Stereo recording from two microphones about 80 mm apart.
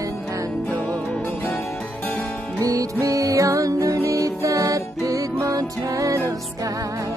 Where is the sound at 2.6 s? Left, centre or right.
Right.